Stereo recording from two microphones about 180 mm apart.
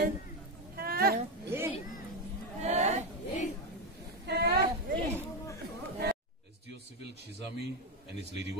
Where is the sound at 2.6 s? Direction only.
40° right (ahead or behind).